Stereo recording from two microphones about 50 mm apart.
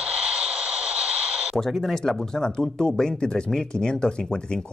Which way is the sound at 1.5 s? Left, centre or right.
Centre.